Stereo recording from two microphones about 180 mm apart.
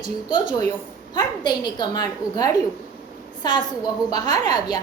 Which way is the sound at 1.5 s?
25° left (ahead or behind).